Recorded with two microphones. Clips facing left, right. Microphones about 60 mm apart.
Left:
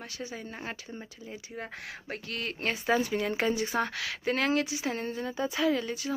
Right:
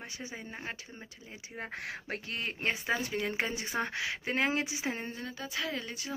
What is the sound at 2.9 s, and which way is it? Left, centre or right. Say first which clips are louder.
Speech: left 9 dB; centre.